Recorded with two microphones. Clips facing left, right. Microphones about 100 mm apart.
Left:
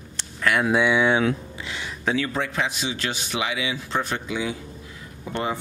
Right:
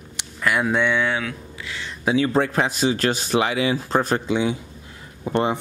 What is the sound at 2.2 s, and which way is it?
Speech, 40° right (ahead or behind).